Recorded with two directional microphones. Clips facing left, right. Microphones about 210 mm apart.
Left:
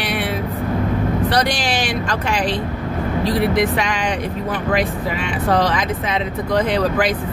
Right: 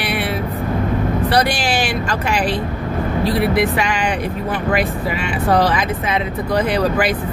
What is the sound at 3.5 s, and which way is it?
Speech, 5° right (ahead or behind).